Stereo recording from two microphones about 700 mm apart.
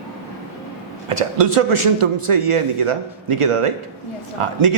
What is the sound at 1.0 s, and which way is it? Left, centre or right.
A man's voice, right.